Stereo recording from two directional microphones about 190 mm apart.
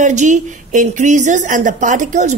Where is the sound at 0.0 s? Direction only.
40° right (ahead or behind).